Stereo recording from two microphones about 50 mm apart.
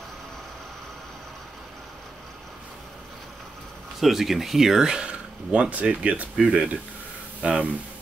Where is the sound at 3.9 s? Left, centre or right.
Centre; by 6.3 s right.